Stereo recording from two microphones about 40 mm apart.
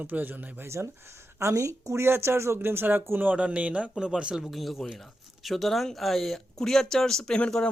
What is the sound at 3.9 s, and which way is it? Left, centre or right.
Speech, centre.